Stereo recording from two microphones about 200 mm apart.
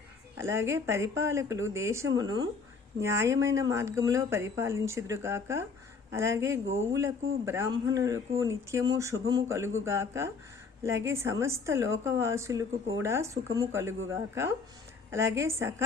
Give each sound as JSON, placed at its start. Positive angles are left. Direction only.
{"t": 0.3, "sound": "speech", "side_deg": -15}